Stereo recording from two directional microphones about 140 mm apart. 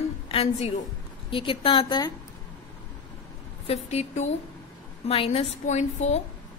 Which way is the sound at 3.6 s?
50° left (ahead or behind).